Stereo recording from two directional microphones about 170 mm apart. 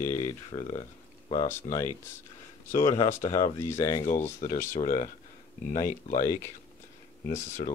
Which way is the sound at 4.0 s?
45° left (ahead or behind).